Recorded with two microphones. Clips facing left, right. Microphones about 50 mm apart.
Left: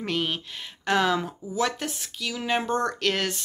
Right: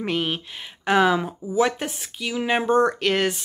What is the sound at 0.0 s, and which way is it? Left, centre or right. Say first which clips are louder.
Speech: right 3 dB; centre.